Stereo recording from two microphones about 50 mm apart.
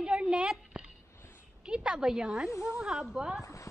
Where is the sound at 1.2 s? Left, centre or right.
Left.